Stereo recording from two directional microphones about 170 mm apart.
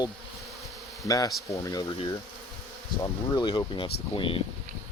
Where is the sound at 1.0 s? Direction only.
20° left (ahead or behind).